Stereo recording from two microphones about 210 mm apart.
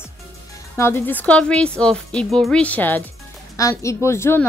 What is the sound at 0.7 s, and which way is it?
Speech, 10° left (ahead or behind).